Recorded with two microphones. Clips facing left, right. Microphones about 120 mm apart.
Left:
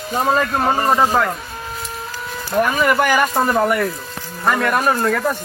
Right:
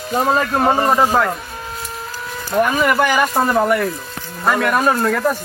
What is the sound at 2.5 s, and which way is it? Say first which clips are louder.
Speech: right 1 dB; centre (ahead or behind).